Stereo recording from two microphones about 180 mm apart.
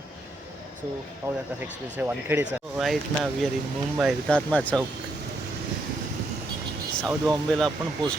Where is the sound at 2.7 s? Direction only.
Centre (ahead or behind).